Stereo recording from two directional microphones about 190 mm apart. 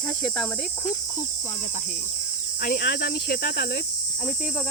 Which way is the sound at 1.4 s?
40° left (ahead or behind).